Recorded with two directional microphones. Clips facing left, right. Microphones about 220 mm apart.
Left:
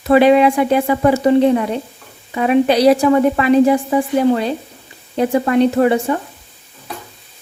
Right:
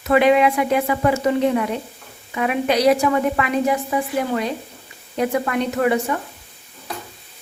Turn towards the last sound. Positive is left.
turn(degrees=30)  # may be behind; listen again after turning